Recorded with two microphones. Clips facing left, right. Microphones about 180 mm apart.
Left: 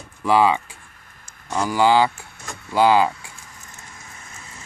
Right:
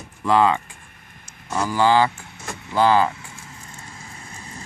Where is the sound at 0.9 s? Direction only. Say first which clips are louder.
Right 2 dB; 20° right (ahead or behind).